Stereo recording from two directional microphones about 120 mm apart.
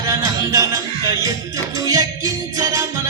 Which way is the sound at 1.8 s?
30° right (ahead or behind).